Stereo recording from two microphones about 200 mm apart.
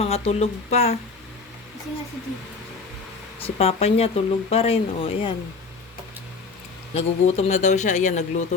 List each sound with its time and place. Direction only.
0.0 s speech: 30° left (ahead or behind)
3.4 s speech: 30° left (ahead or behind)
6.9 s speech: 30° left (ahead or behind)